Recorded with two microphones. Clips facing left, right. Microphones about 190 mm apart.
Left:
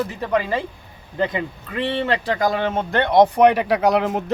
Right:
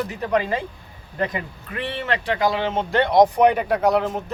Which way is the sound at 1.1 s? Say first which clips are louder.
Left 3 dB; 25° left (ahead or behind).